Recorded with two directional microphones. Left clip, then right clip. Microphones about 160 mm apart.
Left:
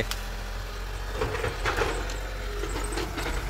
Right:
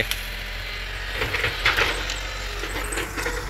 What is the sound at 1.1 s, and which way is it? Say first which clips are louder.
Train: right 5 dB; 50° left (ahead or behind).